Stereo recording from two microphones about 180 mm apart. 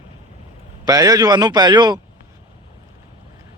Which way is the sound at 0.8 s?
20° right (ahead or behind).